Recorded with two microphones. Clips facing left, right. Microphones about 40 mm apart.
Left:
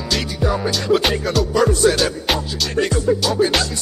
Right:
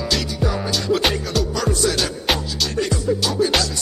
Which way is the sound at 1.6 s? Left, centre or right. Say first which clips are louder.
Left 8 dB; left.